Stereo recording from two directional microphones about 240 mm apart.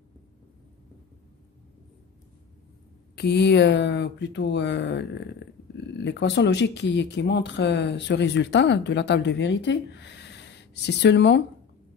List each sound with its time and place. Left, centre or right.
3.2 s speech: left